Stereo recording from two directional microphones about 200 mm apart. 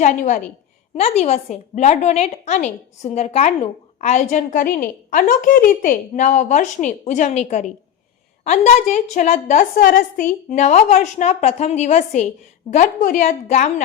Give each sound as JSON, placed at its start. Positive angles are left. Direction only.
{"t": 0.0, "sound": "a woman's voice", "side_deg": 40}